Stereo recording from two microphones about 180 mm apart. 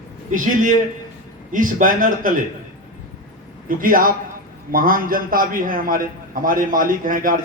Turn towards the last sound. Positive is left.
turn(degrees=-50)  # may be behind; listen again after turning